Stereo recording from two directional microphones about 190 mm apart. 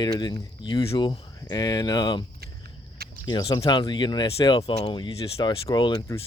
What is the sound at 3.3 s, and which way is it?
Speech, 20° left (ahead or behind).